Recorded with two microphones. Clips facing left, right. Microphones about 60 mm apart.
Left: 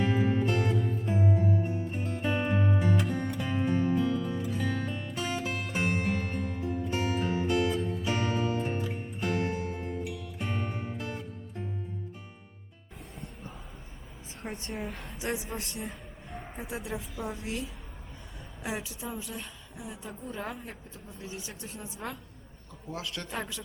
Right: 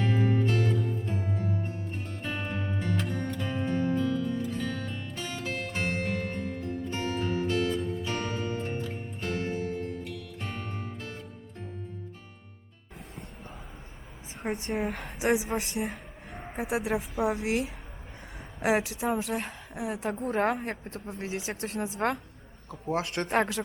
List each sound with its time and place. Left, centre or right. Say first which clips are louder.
0.0 s music: even; centre
14.5 s a woman's voice: right 7 dB; centre
15.5 s a woman's voice: right 7 dB; right
16.6 s speech: right 9 dB; right
21.6 s speech: right 13 dB; right
22.7 s speech: right 8 dB; right